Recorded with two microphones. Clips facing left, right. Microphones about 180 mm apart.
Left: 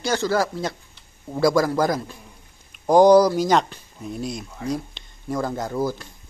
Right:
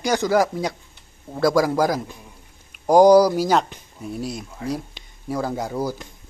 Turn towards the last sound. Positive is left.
turn(degrees=-10)  # may be behind; listen again after turning